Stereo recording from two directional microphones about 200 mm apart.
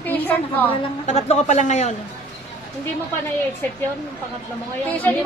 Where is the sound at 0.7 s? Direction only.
35° left (ahead or behind).